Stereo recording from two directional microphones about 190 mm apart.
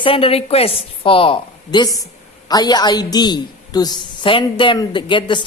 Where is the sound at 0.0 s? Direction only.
30° left (ahead or behind).